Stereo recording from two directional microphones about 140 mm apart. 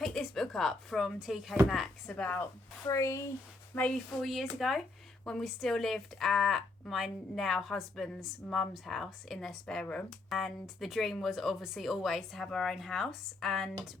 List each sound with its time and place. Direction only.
0.0 s speech: centre (ahead or behind)
2.1 s speech: 10° left (ahead or behind)
2.8 s speech: 20° left (ahead or behind)
3.8 s speech: 5° left (ahead or behind)